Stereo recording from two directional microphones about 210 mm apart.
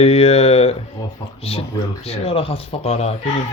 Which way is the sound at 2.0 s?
30° left (ahead or behind).